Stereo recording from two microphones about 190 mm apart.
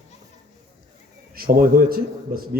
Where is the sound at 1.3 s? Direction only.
50° right (ahead or behind).